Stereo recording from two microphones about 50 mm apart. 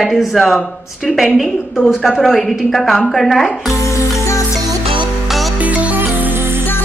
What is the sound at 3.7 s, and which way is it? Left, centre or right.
Music, left.